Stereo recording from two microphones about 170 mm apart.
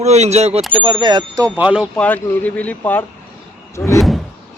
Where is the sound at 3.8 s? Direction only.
20° left (ahead or behind).